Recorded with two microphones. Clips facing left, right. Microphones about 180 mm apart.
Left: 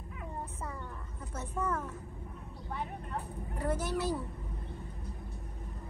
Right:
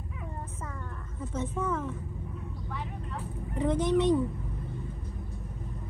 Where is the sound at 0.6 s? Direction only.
10° left (ahead or behind).